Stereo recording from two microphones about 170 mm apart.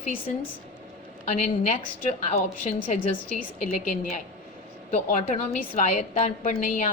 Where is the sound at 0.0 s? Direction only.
55° left (ahead or behind).